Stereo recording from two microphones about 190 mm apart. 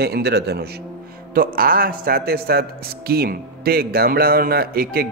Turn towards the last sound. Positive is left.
turn(degrees=-55)  # may be behind; listen again after turning